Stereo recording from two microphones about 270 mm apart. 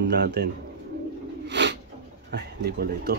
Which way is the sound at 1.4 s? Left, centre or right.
Right.